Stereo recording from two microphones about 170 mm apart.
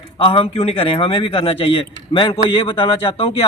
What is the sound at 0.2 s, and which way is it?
A man's voice, 30° left (ahead or behind).